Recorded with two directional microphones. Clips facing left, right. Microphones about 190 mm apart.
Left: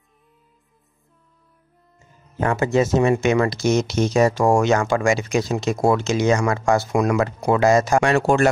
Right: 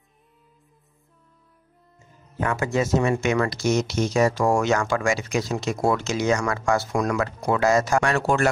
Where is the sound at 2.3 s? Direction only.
25° left (ahead or behind).